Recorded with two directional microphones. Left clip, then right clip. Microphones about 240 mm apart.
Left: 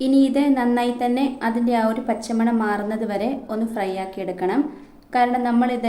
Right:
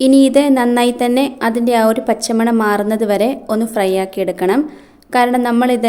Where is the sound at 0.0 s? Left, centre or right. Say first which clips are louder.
Right 8 dB; right.